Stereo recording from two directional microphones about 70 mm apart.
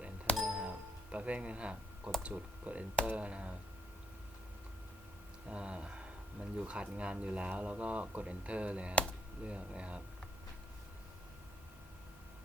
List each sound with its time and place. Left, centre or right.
0.3 s music: centre
1.1 s speech: centre
5.5 s speech: centre